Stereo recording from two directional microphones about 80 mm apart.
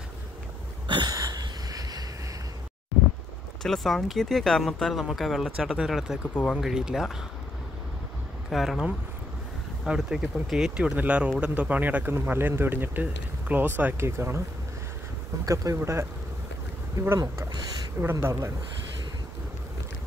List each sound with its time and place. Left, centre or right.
0.8 s dog: right
1.1 s a sound: right
3.6 s speech: centre
6.3 s speech: centre
6.6 s speech: centre
8.5 s speech: centre
9.8 s speech: centre
10.8 s speech: centre; by 14.4 s right
15.4 s speech: right
18.2 s speech: right